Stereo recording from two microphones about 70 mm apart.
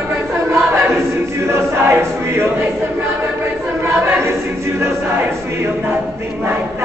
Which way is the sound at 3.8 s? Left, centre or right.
Right.